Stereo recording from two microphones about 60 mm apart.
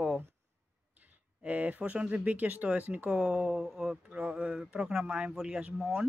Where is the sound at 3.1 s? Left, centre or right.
Centre.